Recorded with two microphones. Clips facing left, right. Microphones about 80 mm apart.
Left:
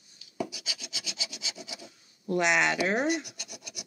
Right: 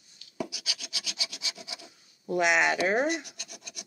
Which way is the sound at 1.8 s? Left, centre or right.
Centre.